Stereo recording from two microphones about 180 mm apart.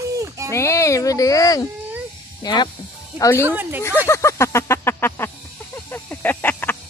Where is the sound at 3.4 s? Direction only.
10° right (ahead or behind).